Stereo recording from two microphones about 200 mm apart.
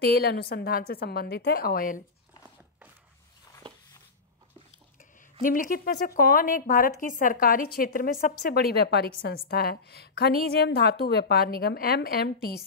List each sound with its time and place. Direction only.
0.0 s a woman's voice: 55° left (ahead or behind)
5.4 s a woman's voice: 45° left (ahead or behind)